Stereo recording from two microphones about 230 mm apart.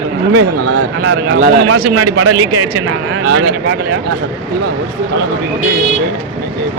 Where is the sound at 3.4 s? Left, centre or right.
Right.